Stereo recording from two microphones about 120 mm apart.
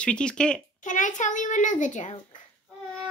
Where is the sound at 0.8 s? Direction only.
90° left.